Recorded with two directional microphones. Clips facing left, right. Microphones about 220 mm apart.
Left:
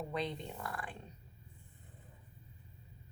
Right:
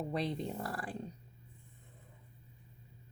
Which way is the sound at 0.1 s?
35° right (ahead or behind).